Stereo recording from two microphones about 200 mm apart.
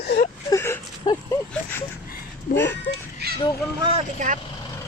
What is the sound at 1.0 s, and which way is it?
Speech, 20° left (ahead or behind).